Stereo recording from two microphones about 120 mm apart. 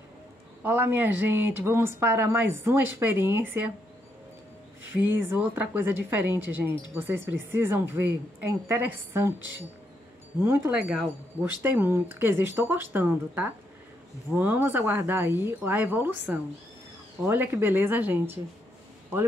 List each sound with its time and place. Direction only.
0.6 s a woman's voice: 20° right (ahead or behind)
4.9 s a woman's voice: 15° right (ahead or behind)
10.4 s speech: 20° right (ahead or behind)
10.7 s a woman's voice: 5° right (ahead or behind)